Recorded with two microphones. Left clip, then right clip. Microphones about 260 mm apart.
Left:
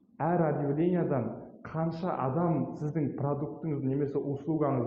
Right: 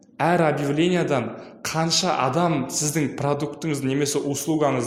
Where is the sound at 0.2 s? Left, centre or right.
Right.